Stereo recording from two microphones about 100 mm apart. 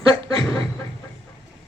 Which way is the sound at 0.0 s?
65° right (ahead or behind).